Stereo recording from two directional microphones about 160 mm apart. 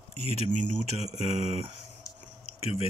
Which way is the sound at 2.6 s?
40° left (ahead or behind).